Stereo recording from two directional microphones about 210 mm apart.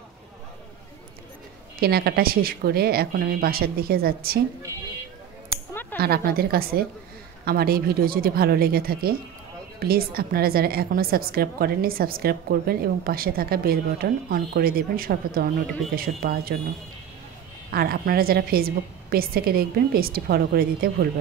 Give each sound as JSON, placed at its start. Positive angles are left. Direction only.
{"t": 1.8, "sound": "a woman's voice", "side_deg": -50}
{"t": 5.7, "sound": "a sound", "side_deg": 10}
{"t": 5.9, "sound": "a woman's voice", "side_deg": -50}
{"t": 17.6, "sound": "a woman's voice", "side_deg": -45}